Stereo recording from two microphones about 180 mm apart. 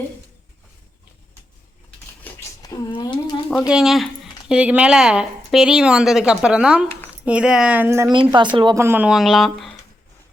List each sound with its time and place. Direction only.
2.2 s a sound: 15° left (ahead or behind)
3.5 s speech: 5° right (ahead or behind)
8.5 s speech: 25° right (ahead or behind)
8.8 s speech: 10° right (ahead or behind)